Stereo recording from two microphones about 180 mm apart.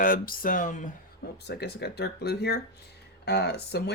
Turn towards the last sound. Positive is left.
turn(degrees=65)  # may be behind; listen again after turning